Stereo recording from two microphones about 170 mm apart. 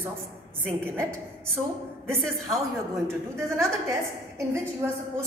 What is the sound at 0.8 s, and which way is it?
Speech, 15° right (ahead or behind).